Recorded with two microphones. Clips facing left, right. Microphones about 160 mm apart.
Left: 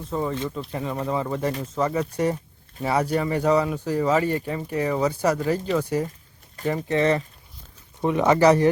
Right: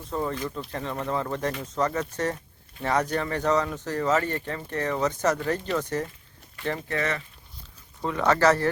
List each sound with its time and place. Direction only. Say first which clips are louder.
0.1 s speech: left 2 dB; 5° left (ahead or behind)
6.7 s speech: left 7 dB; 20° left (ahead or behind)
8.0 s speech: left 4 dB; 15° left (ahead or behind)